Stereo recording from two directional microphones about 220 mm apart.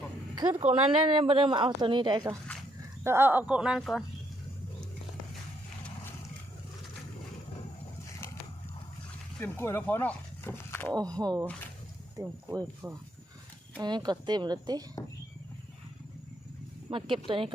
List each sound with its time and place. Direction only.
0.6 s speech: 20° right (ahead or behind); by 4.0 s centre (ahead or behind)
8.2 s dog: 10° left (ahead or behind)
9.4 s speech: 10° left (ahead or behind)
11.2 s speech: 15° right (ahead or behind)
16.9 s speech: 20° right (ahead or behind)